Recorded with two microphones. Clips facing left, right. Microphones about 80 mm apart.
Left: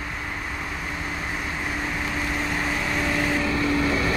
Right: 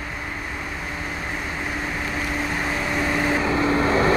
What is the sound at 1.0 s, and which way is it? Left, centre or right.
Vehicle, centre.